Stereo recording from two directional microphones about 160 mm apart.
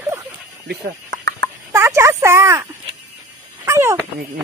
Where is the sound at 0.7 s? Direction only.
90° right.